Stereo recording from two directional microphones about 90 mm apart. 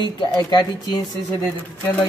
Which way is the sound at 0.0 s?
55° left (ahead or behind).